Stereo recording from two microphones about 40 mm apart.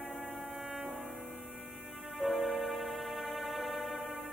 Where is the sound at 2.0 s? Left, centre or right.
Centre.